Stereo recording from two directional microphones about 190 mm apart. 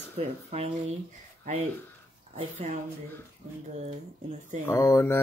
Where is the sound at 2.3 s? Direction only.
40° right (ahead or behind).